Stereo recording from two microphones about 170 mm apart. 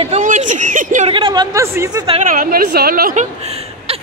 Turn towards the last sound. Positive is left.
turn(degrees=-55)  # may be behind; listen again after turning